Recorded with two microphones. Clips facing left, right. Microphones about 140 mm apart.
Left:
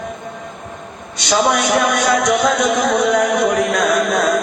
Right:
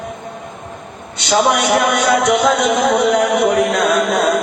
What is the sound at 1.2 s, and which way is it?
Speech, 25° right (ahead or behind).